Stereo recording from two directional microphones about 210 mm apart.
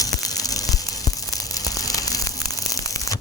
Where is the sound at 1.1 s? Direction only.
15° left (ahead or behind).